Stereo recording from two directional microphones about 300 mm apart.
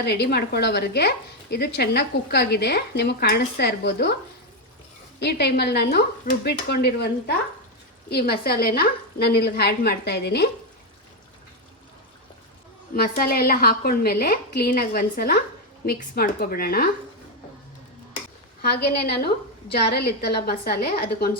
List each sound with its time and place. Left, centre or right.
0.0 s speech: left
5.2 s speech: left
12.9 s a woman's voice: left
18.6 s speech: left